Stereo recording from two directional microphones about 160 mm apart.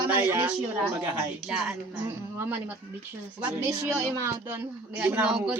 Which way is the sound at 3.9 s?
15° right (ahead or behind).